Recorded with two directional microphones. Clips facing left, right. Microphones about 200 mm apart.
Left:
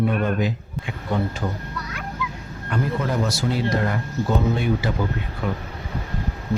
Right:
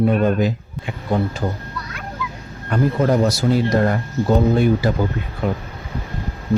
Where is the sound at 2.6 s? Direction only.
40° right (ahead or behind).